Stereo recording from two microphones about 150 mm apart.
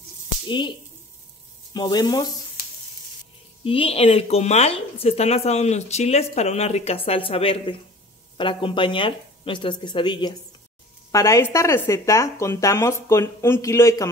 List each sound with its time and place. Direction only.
0.5 s speech: 30° left (ahead or behind)
3.6 s speech: 40° left (ahead or behind)
11.1 s speech: 20° left (ahead or behind)